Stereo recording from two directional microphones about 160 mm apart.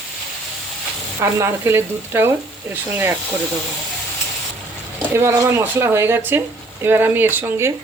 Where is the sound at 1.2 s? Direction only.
15° right (ahead or behind).